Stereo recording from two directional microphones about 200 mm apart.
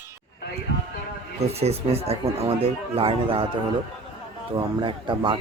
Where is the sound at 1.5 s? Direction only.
30° right (ahead or behind).